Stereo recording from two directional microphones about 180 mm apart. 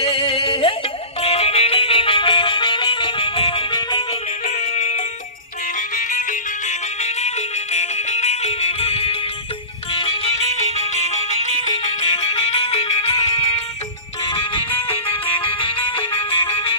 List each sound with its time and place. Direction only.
0.0 s music: 30° left (ahead or behind)
6.0 s music: 45° left (ahead or behind)
15.0 s music: 30° left (ahead or behind)